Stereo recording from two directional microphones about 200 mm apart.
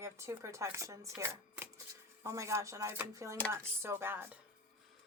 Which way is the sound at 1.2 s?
10° right (ahead or behind).